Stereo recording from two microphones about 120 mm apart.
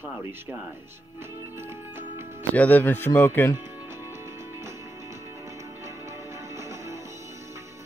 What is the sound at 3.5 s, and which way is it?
Music, 20° right (ahead or behind).